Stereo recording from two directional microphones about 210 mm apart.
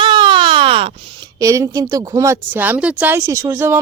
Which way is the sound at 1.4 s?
15° right (ahead or behind).